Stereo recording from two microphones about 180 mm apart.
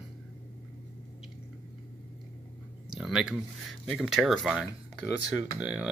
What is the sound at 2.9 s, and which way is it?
Speech, centre (ahead or behind).